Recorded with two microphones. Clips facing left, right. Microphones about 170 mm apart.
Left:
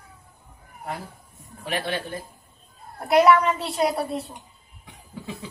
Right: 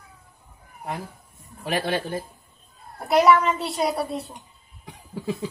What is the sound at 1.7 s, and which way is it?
Speech, 40° right (ahead or behind).